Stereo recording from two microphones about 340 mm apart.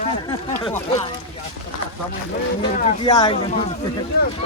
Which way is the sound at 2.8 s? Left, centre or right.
Centre.